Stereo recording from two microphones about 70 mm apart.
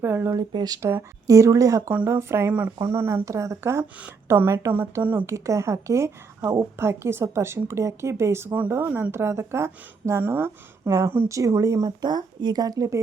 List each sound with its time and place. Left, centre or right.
0.0 s a woman's voice: right
0.3 s speech: right
0.8 s a woman's voice: right
1.3 s a woman's voice: right
2.0 s a woman's voice: right
2.5 s speech: right
2.8 s a woman's voice: right
3.2 s a woman's voice: right
5.2 s a woman's voice: right
10.8 s a woman's voice: right
11.9 s speech: right